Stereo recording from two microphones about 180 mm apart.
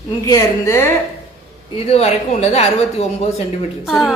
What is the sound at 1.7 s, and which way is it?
Speech, 35° left (ahead or behind).